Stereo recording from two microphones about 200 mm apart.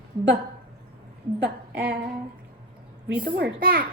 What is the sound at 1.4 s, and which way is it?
Speech, 55° right (ahead or behind).